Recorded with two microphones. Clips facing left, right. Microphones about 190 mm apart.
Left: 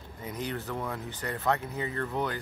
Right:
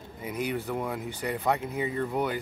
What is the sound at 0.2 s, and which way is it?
Speech, 10° right (ahead or behind).